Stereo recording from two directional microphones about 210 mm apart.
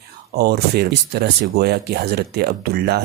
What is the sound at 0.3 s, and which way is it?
Speech, 50° right (ahead or behind).